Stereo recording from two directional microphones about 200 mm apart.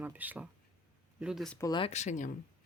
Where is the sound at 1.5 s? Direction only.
20° left (ahead or behind).